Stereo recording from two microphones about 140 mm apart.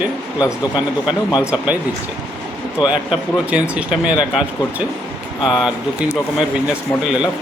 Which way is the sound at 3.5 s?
10° right (ahead or behind).